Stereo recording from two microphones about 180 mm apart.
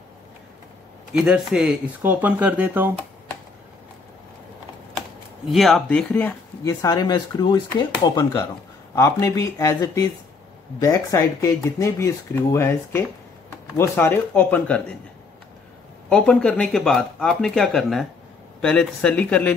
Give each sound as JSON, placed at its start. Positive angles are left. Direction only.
{"t": 1.1, "sound": "speech", "side_deg": -5}
{"t": 5.5, "sound": "speech", "side_deg": 0}
{"t": 6.6, "sound": "speech", "side_deg": 20}
{"t": 16.1, "sound": "speech", "side_deg": 5}